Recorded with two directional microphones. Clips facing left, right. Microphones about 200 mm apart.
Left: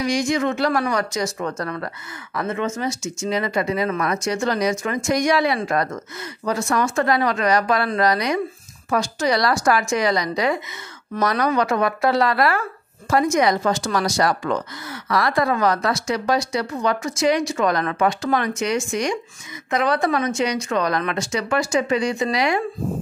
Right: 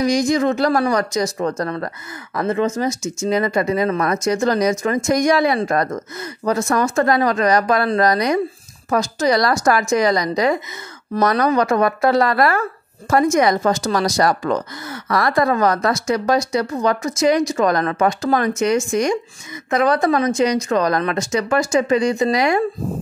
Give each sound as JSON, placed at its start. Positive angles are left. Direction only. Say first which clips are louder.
{"t": 0.0, "sound": "speech", "louder": "right 4 dB", "side_deg": -40}
{"t": 2.9, "sound": "speech", "louder": "right 4 dB", "side_deg": -20}
{"t": 3.3, "sound": "speech", "louder": "right 4 dB", "side_deg": -45}